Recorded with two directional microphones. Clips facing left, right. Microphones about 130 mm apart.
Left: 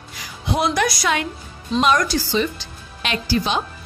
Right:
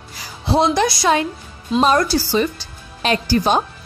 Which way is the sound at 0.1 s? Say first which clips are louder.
Right 5 dB; 35° right (ahead or behind).